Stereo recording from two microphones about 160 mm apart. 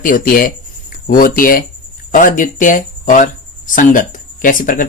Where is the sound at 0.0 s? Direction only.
60° left (ahead or behind).